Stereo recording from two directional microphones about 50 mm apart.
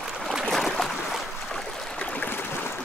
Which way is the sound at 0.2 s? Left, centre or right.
Centre.